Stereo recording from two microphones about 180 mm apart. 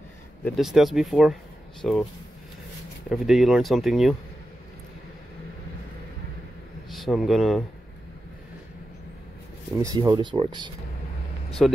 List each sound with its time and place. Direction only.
0.6 s speech: centre (ahead or behind)
3.1 s speech: centre (ahead or behind)
6.9 s a man's voice: centre (ahead or behind)
9.8 s speech: 20° right (ahead or behind)
11.6 s speech: centre (ahead or behind)